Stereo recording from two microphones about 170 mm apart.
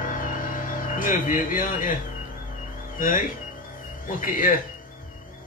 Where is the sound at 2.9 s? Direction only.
55° left (ahead or behind).